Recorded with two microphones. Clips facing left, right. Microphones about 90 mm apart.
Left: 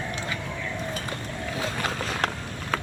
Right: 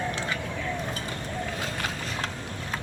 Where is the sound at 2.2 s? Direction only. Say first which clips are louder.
Left 6 dB; 65° left (ahead or behind).